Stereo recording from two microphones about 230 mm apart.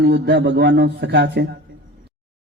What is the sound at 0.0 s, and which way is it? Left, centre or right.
A man's voice, right.